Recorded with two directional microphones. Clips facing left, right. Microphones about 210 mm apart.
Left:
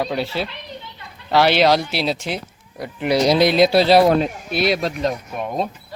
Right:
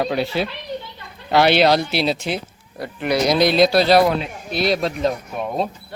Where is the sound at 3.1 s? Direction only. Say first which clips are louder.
Left 2 dB; 30° left (ahead or behind).